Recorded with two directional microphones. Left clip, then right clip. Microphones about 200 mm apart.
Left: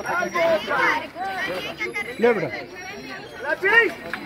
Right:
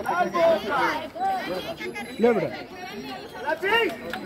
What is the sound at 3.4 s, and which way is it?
Speech, 55° right (ahead or behind).